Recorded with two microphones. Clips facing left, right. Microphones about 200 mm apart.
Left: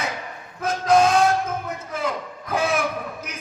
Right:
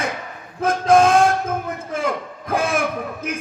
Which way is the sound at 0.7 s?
50° right (ahead or behind).